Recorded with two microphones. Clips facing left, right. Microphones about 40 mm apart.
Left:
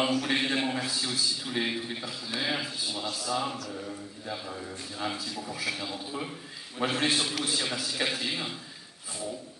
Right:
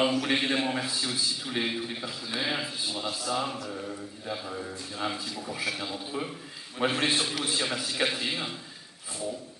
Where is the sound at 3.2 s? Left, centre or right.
Right.